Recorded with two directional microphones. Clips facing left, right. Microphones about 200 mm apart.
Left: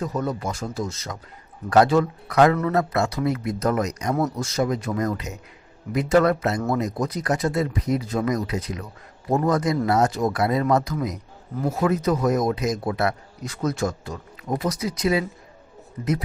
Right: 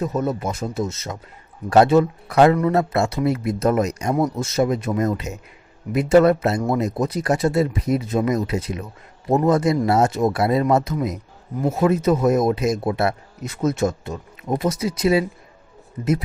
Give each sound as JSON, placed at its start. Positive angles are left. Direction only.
{"t": 0.0, "sound": "speech", "side_deg": -20}